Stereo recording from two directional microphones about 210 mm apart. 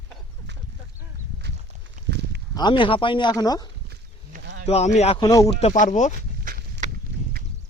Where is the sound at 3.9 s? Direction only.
50° right (ahead or behind).